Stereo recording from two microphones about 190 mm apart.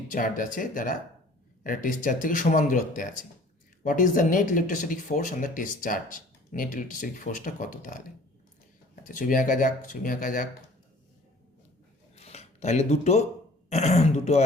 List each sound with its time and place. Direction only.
0.1 s speech: 45° left (ahead or behind)
9.0 s speech: 45° left (ahead or behind)
12.1 s a sound: 35° left (ahead or behind)
13.7 s speech: 35° left (ahead or behind)